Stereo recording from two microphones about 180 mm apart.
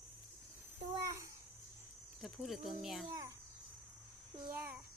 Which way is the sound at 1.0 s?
15° right (ahead or behind).